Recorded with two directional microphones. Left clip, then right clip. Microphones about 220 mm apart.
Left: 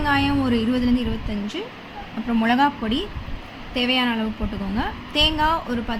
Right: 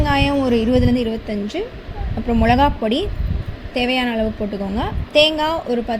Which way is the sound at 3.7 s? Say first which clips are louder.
Right 2 dB; 10° right (ahead or behind).